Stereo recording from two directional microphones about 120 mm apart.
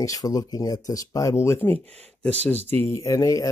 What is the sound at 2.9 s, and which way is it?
Speech, 25° left (ahead or behind).